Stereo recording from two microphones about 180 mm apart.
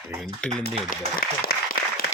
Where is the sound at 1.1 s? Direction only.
55° left (ahead or behind).